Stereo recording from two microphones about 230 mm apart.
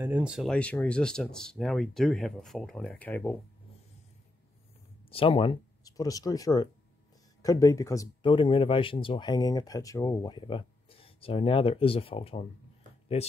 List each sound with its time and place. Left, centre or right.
0.0 s speech: centre
5.1 s speech: left